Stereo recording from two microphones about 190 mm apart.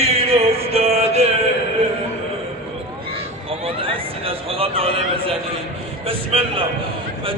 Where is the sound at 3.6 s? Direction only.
30° right (ahead or behind).